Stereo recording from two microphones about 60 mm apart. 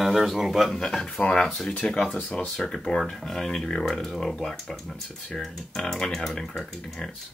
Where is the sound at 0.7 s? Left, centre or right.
Centre.